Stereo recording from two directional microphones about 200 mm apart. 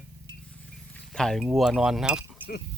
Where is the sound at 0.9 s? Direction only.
5° left (ahead or behind).